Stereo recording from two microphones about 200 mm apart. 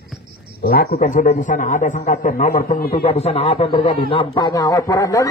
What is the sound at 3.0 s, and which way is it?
A man's voice, 30° left (ahead or behind).